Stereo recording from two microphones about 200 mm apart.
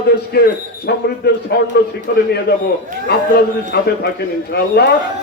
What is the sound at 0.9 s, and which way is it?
A man's voice, 55° left (ahead or behind).